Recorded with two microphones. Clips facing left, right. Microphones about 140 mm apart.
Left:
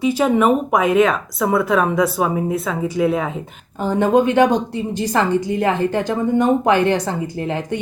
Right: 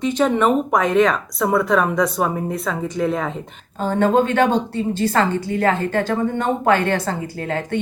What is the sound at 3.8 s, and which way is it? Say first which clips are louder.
A woman's voice: left 1 dB; 15° left (ahead or behind).